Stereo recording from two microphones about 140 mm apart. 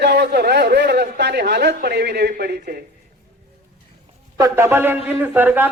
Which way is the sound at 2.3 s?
90° right.